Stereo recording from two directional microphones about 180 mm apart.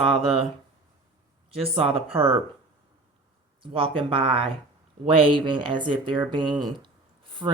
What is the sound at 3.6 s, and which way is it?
Speech, 30° right (ahead or behind).